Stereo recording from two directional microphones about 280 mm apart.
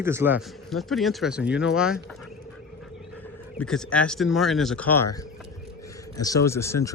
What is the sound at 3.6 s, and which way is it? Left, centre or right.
Speech, centre.